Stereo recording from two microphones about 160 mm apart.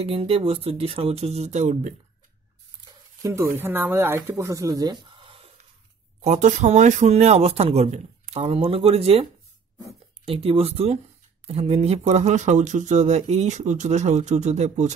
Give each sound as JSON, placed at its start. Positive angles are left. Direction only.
{"t": 0.0, "sound": "speech", "side_deg": -35}
{"t": 3.2, "sound": "speech", "side_deg": -20}
{"t": 5.0, "sound": "a sound", "side_deg": -35}
{"t": 6.2, "sound": "speech", "side_deg": -50}